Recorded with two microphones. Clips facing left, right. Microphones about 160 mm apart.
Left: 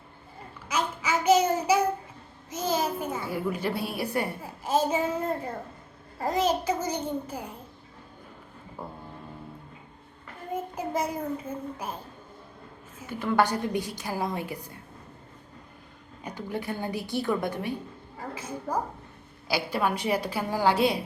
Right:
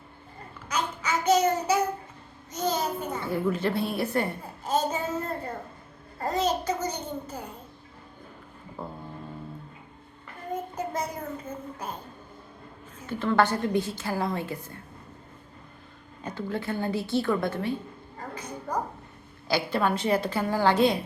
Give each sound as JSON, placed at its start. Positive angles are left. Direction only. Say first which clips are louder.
{"t": 0.7, "sound": "child singing", "louder": "left 1 dB", "side_deg": 10}
{"t": 2.5, "sound": "a sound", "louder": "even", "side_deg": 10}
{"t": 6.1, "sound": "a woman's voice", "louder": "left 1 dB", "side_deg": 10}
{"t": 8.8, "sound": "a sound", "louder": "right 2 dB", "side_deg": 10}
{"t": 10.5, "sound": "a child's voice", "louder": "left 1 dB", "side_deg": 10}
{"t": 13.1, "sound": "a woman's voice", "louder": "right 1 dB", "side_deg": 10}
{"t": 16.2, "sound": "a woman's voice", "louder": "right 2 dB", "side_deg": 15}